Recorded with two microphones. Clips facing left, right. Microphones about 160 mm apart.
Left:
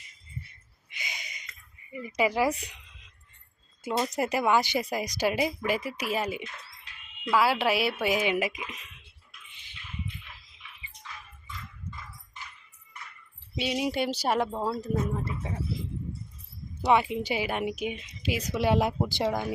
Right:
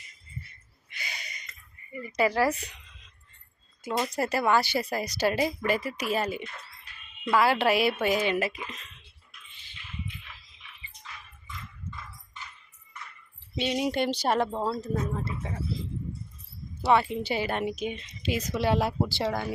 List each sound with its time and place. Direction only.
0.9 s gasp: 15° left (ahead or behind)
1.9 s speech: 10° left (ahead or behind)
3.8 s speech: 5° left (ahead or behind)
4.1 s speech: 15° left (ahead or behind)
13.6 s speech: 5° left (ahead or behind)
16.8 s speech: 15° left (ahead or behind)